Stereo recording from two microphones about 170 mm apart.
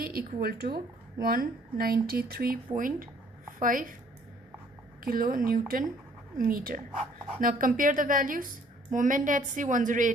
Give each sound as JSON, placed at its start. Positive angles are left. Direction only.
{"t": 0.0, "sound": "a woman's voice", "side_deg": -60}
{"t": 5.0, "sound": "a woman's voice", "side_deg": -55}